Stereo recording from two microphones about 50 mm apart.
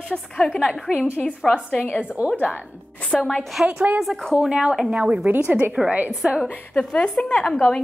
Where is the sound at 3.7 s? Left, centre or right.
Right.